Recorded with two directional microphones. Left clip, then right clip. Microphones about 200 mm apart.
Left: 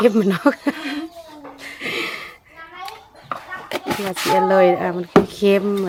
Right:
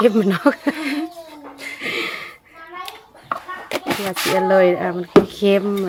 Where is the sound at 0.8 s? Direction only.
15° right (ahead or behind).